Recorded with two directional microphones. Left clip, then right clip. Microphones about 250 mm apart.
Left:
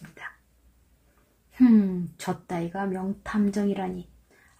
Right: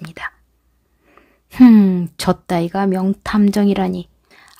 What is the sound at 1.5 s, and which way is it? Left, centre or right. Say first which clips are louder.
Speech: right 10 dB; right.